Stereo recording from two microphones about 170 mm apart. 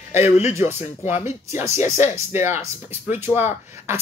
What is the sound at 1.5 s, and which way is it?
Speech, 15° right (ahead or behind).